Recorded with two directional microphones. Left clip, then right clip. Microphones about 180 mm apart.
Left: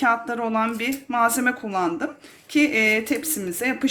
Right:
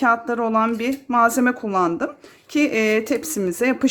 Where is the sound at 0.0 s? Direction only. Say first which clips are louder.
Right 3 dB; 45° right (ahead or behind).